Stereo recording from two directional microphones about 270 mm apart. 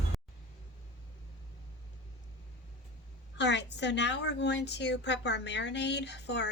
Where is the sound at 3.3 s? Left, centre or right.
Left.